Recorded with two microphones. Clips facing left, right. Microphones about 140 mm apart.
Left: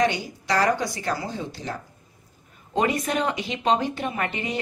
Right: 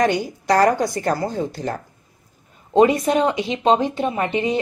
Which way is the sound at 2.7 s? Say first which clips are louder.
Right 8 dB; 30° right (ahead or behind).